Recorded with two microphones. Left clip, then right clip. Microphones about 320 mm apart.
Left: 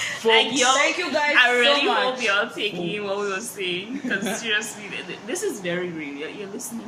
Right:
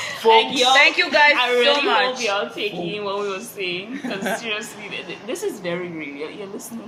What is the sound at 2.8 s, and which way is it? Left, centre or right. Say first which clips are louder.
A woman's voice: right 1 dB; centre.